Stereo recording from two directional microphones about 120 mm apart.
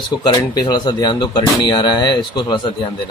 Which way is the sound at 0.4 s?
35° left (ahead or behind).